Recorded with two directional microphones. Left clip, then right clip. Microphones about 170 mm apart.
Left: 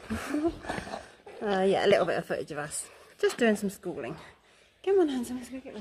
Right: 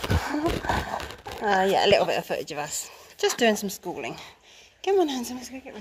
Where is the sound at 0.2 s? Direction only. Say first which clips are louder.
Right 4 dB; 30° left (ahead or behind).